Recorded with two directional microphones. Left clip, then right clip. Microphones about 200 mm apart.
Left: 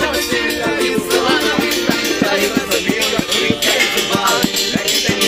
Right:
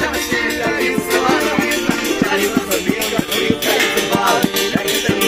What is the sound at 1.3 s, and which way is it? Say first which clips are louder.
Music: left 1 dB; 45° right (ahead or behind).